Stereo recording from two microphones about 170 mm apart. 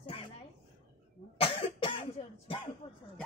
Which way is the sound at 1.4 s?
35° left (ahead or behind).